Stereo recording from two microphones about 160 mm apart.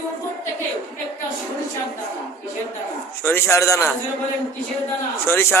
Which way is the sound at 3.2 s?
15° left (ahead or behind).